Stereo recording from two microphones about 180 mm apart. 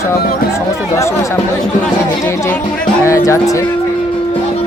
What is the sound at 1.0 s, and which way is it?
Speech, 15° left (ahead or behind).